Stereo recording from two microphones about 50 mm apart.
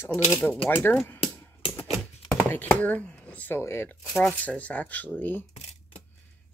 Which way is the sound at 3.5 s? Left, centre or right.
Left.